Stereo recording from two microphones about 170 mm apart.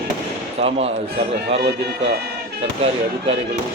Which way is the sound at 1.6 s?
70° right (ahead or behind).